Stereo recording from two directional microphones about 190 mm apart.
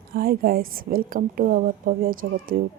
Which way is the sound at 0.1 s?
50° right (ahead or behind).